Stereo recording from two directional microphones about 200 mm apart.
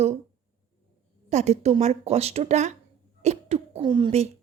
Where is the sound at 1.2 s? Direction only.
35° right (ahead or behind).